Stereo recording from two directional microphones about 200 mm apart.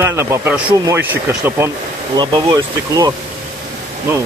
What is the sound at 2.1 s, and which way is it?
Speech, 20° right (ahead or behind).